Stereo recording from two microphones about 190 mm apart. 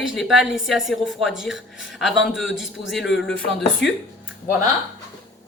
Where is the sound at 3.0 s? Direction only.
70° left (ahead or behind).